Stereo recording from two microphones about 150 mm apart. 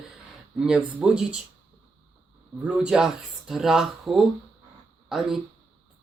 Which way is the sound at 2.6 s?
5° right (ahead or behind).